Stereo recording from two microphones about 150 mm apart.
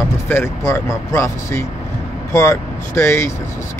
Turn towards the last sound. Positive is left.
turn(degrees=20)  # may be behind; listen again after turning